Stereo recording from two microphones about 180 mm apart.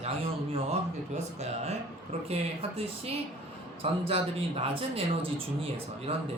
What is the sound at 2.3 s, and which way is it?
Speech, 35° right (ahead or behind).